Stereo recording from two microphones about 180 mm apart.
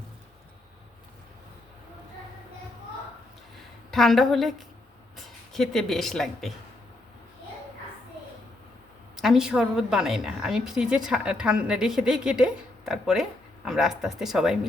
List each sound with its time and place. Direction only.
3.9 s a woman's voice: centre (ahead or behind)
9.1 s a woman's voice: centre (ahead or behind)